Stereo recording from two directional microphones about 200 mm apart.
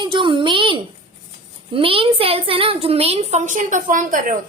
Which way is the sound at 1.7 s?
25° right (ahead or behind).